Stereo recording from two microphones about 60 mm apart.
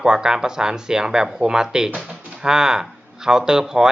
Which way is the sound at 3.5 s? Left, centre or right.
Centre.